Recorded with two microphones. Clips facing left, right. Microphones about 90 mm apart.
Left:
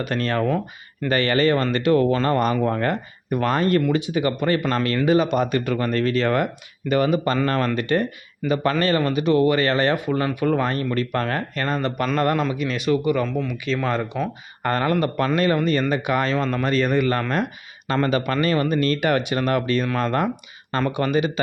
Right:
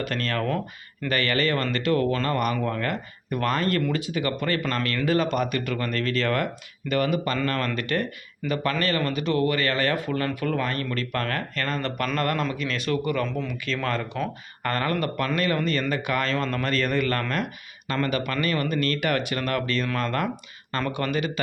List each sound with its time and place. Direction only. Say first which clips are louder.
0.0 s speech: left 5 dB; 20° left (ahead or behind)
13.2 s speech: left 4 dB; 5° left (ahead or behind)
13.7 s speech: left 3 dB; 15° left (ahead or behind)